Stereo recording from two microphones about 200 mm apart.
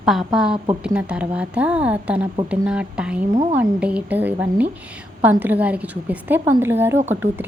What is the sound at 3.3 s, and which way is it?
Speech, 35° right (ahead or behind).